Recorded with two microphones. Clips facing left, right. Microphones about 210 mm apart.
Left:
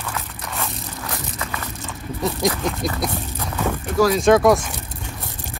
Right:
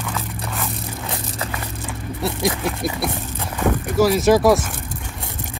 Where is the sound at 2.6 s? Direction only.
5° right (ahead or behind).